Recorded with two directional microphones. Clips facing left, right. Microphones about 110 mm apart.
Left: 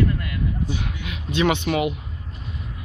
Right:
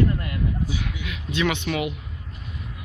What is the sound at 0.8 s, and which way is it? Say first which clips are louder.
Speech: left 1 dB; 30° left (ahead or behind).